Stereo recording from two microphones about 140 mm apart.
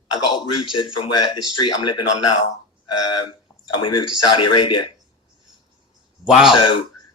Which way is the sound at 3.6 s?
35° left (ahead or behind).